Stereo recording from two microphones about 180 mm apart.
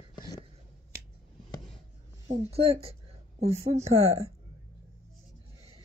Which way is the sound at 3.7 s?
35° right (ahead or behind).